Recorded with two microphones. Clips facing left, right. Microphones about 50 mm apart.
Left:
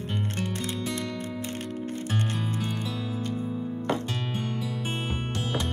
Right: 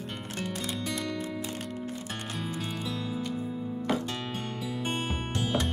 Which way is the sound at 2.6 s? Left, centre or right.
Centre.